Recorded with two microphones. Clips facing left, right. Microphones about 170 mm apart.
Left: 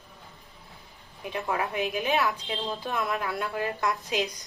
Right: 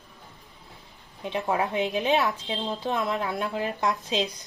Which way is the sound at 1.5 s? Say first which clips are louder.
Right 3 dB; 20° right (ahead or behind).